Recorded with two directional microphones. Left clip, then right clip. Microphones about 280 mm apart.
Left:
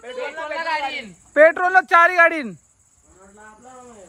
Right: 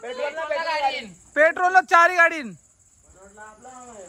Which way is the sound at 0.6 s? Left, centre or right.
Centre.